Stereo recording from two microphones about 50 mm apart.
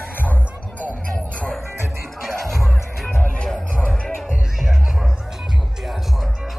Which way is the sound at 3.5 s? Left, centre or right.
Centre.